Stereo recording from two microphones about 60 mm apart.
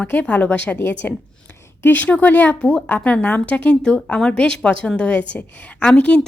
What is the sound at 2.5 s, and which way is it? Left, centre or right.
A woman's voice, centre.